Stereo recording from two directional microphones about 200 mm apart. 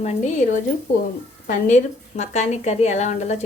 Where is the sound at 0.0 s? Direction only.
35° left (ahead or behind).